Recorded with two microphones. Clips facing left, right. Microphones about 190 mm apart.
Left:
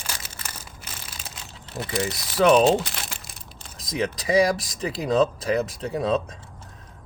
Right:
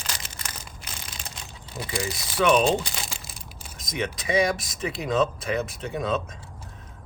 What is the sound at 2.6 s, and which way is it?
Crumpling, centre (ahead or behind).